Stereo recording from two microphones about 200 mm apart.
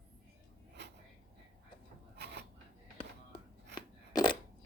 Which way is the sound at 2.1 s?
55° right (ahead or behind).